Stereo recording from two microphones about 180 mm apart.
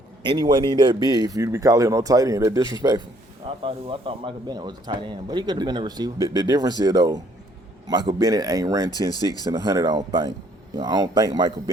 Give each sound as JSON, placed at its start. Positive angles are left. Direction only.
{"t": 0.2, "sound": "a man's voice", "side_deg": -25}
{"t": 3.6, "sound": "a man's voice", "side_deg": -30}